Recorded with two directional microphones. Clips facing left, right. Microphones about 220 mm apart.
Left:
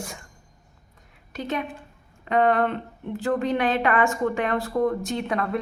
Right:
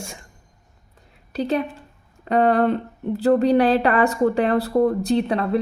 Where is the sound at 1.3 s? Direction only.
35° right (ahead or behind).